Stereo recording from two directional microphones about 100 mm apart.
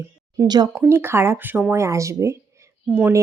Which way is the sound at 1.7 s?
30° right (ahead or behind).